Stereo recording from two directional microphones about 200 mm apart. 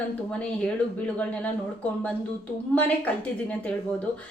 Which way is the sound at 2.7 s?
5° left (ahead or behind).